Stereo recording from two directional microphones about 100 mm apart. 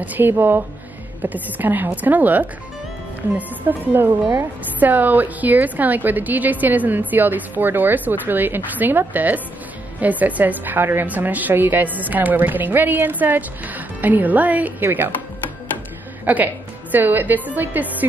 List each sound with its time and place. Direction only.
0.0 s a woman's voice: 20° right (ahead or behind)
16.3 s a woman's voice: 15° right (ahead or behind)